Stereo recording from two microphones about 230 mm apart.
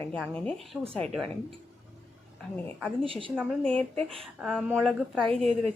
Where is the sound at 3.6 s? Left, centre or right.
Centre.